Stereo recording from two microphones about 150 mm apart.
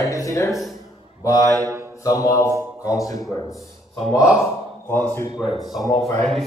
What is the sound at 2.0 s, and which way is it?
Speech, 20° left (ahead or behind).